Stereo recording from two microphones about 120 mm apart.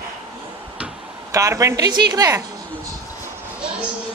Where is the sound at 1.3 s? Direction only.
25° right (ahead or behind).